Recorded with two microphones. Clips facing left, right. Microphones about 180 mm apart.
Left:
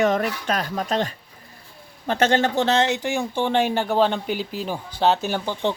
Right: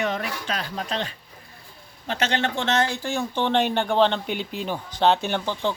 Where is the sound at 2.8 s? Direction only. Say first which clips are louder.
Left 3 dB; 20° left (ahead or behind).